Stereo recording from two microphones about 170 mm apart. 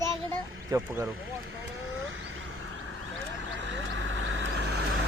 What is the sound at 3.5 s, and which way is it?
Vehicle, 90° right.